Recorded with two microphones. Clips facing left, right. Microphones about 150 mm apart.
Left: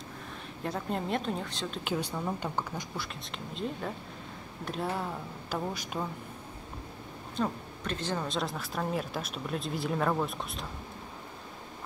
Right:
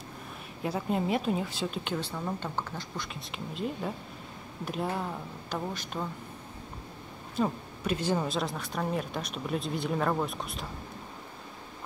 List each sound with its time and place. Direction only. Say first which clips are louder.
0.6 s a woman's voice: right 3 dB; 5° right (ahead or behind)
1.9 s a woman's voice: left 1 dB; 10° left (ahead or behind)
3.2 s speech: right 2 dB; centre (ahead or behind)
5.5 s a woman's voice: left 1 dB; 10° left (ahead or behind)
7.3 s a woman's voice: right 3 dB; 10° right (ahead or behind)
8.4 s speech: right 1 dB; centre (ahead or behind)